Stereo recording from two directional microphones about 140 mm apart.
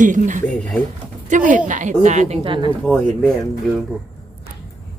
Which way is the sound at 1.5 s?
65° right (ahead or behind).